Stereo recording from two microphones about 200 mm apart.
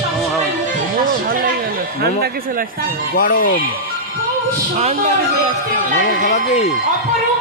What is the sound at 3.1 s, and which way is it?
Speech, 45° left (ahead or behind).